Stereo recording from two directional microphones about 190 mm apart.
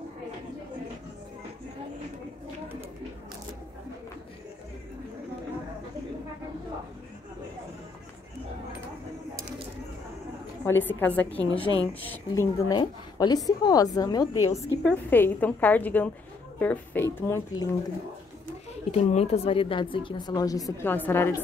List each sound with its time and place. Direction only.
10.6 s a woman's voice: 10° left (ahead or behind)
14.8 s a woman's voice: 5° left (ahead or behind)
18.9 s a woman's voice: 35° left (ahead or behind); by 21.4 s 10° left (ahead or behind)